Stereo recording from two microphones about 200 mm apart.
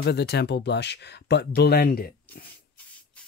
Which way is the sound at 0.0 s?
55° left (ahead or behind).